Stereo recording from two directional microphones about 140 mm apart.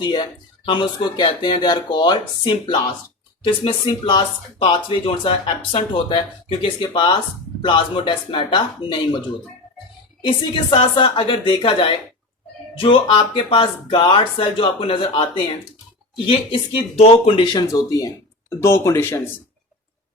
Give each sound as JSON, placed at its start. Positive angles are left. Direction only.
{"t": 0.0, "sound": "speech", "side_deg": 35}
{"t": 10.2, "sound": "speech", "side_deg": 35}
{"t": 16.2, "sound": "speech", "side_deg": 40}
{"t": 17.5, "sound": "speech", "side_deg": 25}